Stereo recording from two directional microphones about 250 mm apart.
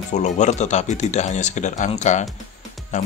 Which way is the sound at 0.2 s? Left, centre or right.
Left.